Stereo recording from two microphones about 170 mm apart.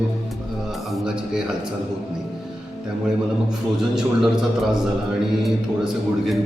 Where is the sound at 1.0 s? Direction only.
5° right (ahead or behind).